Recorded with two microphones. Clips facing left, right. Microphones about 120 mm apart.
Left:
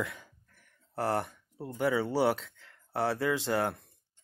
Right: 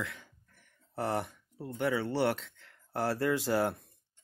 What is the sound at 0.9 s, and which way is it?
Speech, centre (ahead or behind).